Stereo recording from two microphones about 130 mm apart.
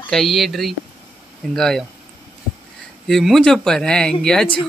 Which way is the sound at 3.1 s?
Centre (ahead or behind).